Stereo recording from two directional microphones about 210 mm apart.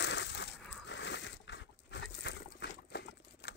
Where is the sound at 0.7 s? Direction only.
55° left (ahead or behind).